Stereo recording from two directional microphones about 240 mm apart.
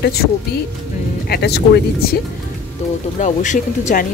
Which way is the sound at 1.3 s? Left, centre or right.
Left.